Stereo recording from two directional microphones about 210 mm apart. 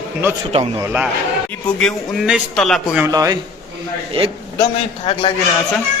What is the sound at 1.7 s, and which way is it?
A man's voice, 5° left (ahead or behind).